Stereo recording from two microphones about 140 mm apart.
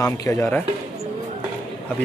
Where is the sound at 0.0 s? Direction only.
25° left (ahead or behind).